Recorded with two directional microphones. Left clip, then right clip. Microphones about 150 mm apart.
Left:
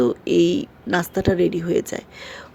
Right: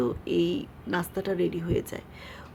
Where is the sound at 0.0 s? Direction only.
35° left (ahead or behind).